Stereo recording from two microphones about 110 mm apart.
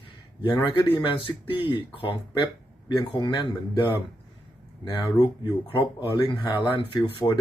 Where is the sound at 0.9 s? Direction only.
50° left (ahead or behind).